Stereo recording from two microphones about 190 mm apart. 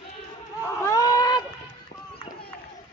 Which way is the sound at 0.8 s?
20° left (ahead or behind).